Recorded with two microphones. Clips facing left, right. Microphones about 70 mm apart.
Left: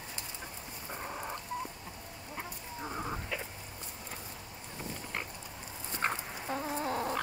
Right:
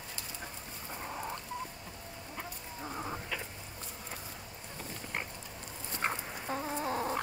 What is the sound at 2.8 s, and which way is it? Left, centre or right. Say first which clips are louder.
Chicken: left 1 dB; centre.